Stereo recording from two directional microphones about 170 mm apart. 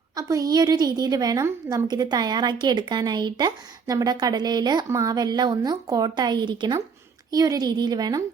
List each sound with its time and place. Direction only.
0.2 s a woman's voice: 20° right (ahead or behind)